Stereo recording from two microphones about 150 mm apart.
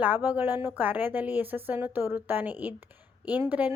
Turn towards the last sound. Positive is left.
turn(degrees=-10)  # may be behind; listen again after turning